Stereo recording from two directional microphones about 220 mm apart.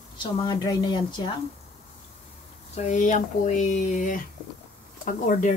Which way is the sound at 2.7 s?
30° left (ahead or behind).